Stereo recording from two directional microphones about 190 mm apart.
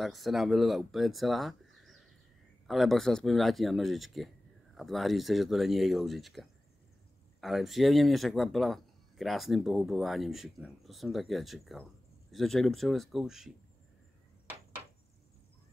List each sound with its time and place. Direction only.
0.0 s speech: centre (ahead or behind)